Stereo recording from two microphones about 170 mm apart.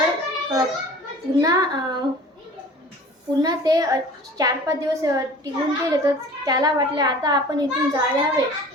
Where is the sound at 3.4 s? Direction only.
20° right (ahead or behind).